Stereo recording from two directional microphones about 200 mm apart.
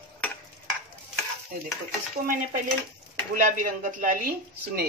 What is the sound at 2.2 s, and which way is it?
A woman's voice, 45° right (ahead or behind).